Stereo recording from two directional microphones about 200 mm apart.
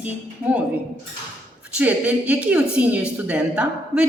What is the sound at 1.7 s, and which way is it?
A woman's voice, 5° right (ahead or behind).